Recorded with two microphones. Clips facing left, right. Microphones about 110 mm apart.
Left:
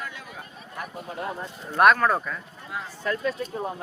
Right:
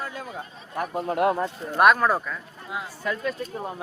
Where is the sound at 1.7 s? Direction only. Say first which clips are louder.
Even; centre (ahead or behind).